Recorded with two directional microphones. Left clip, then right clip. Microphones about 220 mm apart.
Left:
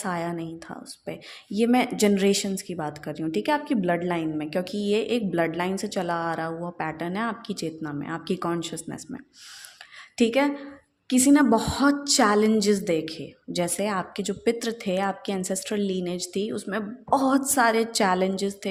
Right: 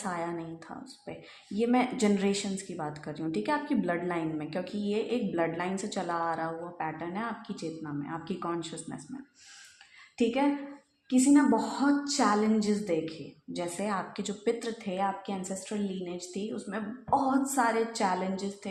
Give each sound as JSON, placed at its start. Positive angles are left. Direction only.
{"t": 0.0, "sound": "a woman's voice", "side_deg": 40}
{"t": 10.2, "sound": "speech", "side_deg": 50}